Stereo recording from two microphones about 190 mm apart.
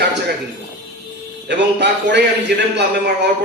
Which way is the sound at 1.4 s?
65° right (ahead or behind).